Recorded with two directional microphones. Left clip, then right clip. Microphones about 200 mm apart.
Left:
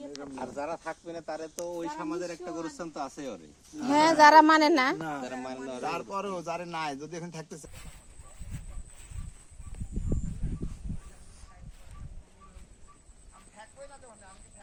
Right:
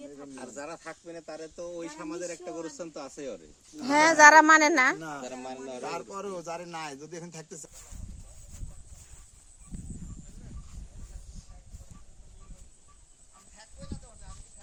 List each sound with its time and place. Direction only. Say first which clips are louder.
0.0 s speech: left 4 dB; 45° right (ahead or behind)
2.0 s a man's voice: left 2 dB; 5° right (ahead or behind); by 3.8 s 10° left (ahead or behind)
3.8 s speech: right 2 dB; 20° right (ahead or behind)
5.2 s speech: left 2 dB; 10° left (ahead or behind)
5.8 s a man's voice: left 4 dB; 20° right (ahead or behind)